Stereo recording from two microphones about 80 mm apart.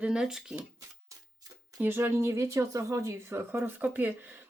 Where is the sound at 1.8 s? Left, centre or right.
Right.